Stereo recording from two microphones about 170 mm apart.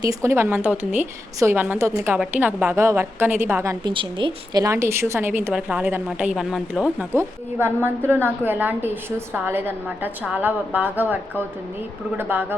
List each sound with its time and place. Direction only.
0.0 s speech: 20° right (ahead or behind)